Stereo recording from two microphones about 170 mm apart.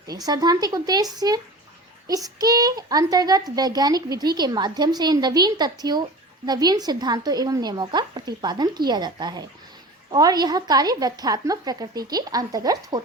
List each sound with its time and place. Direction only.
0.3 s a child's voice: 25° right (ahead or behind)